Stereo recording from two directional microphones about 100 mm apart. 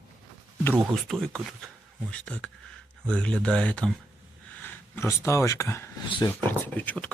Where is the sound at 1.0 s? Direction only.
5° left (ahead or behind).